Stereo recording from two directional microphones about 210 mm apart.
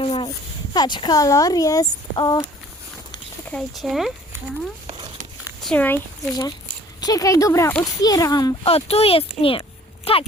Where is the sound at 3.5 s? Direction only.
Centre (ahead or behind).